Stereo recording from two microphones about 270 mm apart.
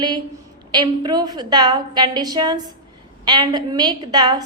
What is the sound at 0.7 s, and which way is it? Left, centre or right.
A woman's voice, centre.